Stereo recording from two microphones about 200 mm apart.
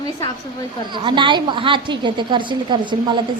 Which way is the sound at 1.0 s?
25° right (ahead or behind).